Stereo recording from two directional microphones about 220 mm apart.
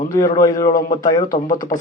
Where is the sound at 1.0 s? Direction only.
15° left (ahead or behind).